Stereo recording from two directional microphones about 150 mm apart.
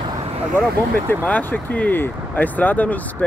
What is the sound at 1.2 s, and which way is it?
Speech, 10° left (ahead or behind).